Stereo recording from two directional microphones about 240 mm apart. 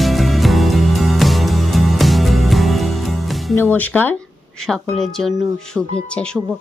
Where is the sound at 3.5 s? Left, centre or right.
Centre.